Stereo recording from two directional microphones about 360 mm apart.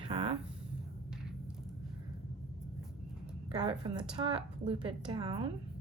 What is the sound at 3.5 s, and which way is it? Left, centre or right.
Speech, centre.